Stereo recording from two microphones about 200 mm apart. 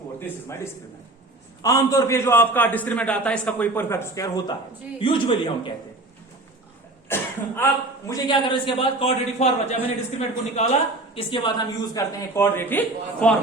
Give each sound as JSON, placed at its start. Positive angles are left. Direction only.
{"t": 0.2, "sound": "a man's voice", "side_deg": 10}
{"t": 7.1, "sound": "a man's voice", "side_deg": 10}